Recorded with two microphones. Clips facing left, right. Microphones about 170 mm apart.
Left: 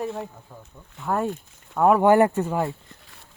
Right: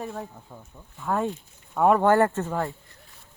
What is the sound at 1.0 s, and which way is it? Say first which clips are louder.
Speech: left 1 dB; 5° left (ahead or behind).